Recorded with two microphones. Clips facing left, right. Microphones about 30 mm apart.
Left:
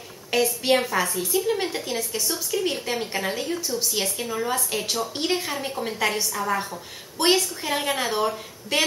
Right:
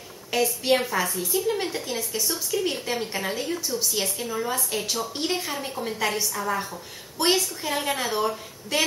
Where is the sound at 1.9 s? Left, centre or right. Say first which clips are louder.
Left 1 dB; centre.